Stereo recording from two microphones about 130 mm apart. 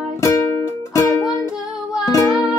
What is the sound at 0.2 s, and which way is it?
Music, 20° left (ahead or behind).